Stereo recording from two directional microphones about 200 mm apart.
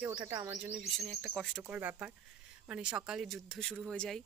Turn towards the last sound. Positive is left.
turn(degrees=5)  # may be behind; listen again after turning